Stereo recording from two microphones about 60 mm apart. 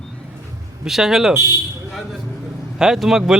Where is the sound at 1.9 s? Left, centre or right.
Centre.